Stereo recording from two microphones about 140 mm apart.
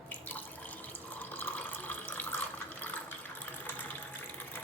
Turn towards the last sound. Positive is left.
turn(degrees=10)  # may be behind; listen again after turning